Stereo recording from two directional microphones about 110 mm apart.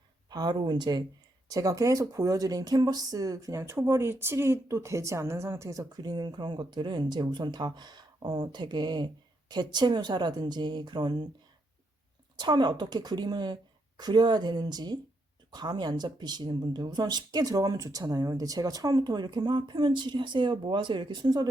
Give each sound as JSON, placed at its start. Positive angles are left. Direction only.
{"t": 0.3, "sound": "speech", "side_deg": -40}
{"t": 12.4, "sound": "speech", "side_deg": -45}